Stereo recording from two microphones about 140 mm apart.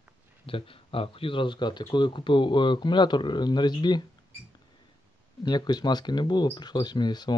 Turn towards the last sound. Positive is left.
turn(degrees=30)  # may be behind; listen again after turning